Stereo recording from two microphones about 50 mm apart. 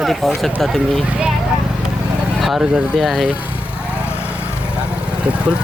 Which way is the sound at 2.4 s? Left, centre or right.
Centre.